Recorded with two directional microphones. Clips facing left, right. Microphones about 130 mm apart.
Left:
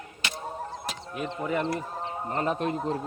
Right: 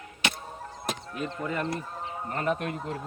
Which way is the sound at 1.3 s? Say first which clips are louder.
Left 4 dB; 15° left (ahead or behind).